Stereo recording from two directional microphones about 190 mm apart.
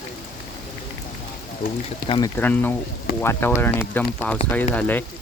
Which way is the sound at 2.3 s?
10° left (ahead or behind).